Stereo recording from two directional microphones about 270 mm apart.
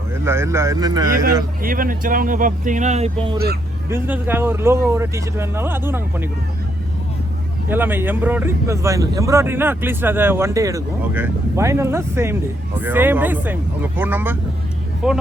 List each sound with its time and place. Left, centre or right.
0.1 s speech: centre
1.6 s speech: right
3.3 s speech: right
3.8 s speech: centre
7.7 s speech: centre